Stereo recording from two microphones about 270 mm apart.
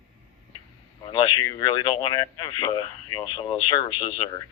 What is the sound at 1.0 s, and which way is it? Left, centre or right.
Speech, centre.